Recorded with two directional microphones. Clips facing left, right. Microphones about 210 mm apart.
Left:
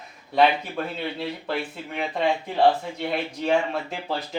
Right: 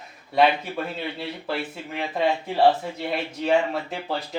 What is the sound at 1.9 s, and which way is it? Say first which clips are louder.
Speech: even; centre (ahead or behind).